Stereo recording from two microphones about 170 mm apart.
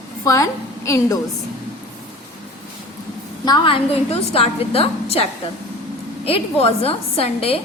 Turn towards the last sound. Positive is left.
turn(degrees=35)  # may be behind; listen again after turning